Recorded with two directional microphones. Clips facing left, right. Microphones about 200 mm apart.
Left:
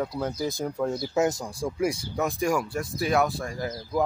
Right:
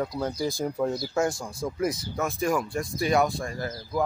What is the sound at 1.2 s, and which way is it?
Speech, 20° left (ahead or behind).